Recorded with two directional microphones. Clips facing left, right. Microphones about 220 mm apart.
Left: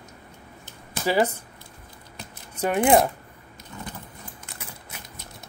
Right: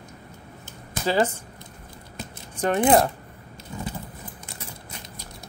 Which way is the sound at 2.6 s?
10° left (ahead or behind).